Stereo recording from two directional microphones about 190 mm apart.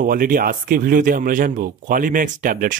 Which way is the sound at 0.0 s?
45° right (ahead or behind).